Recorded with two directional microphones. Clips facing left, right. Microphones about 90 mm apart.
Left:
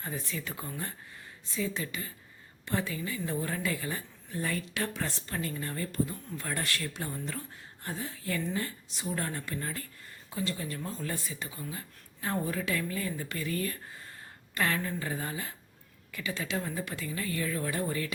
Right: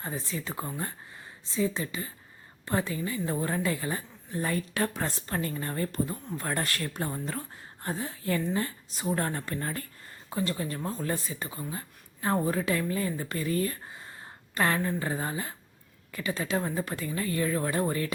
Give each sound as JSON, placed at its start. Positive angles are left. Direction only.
{"t": 0.0, "sound": "speech", "side_deg": -30}